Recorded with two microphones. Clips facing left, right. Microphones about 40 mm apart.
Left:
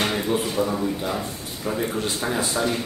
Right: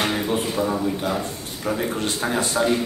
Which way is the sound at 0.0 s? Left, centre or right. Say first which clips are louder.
Even; centre.